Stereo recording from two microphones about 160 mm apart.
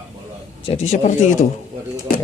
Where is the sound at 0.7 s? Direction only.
45° left (ahead or behind).